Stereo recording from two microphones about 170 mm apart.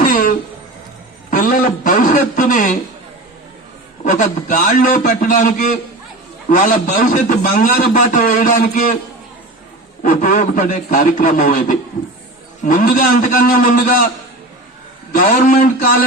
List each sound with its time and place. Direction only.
0.0 s music: 55° left (ahead or behind)
1.3 s a sound: 55° left (ahead or behind)
4.0 s a man's voice: 50° left (ahead or behind)
10.0 s a man's voice: 50° left (ahead or behind)
15.1 s a man's voice: 50° left (ahead or behind)